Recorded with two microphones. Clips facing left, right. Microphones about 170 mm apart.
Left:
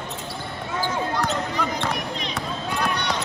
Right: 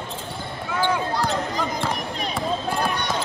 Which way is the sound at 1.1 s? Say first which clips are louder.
Right 1 dB; 35° right (ahead or behind).